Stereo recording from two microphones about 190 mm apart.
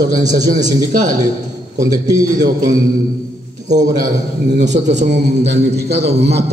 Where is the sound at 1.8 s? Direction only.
20° right (ahead or behind).